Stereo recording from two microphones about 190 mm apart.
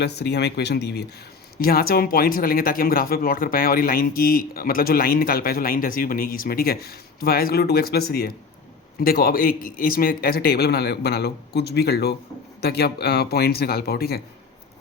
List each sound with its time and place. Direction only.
0.0 s speech: 60° left (ahead or behind)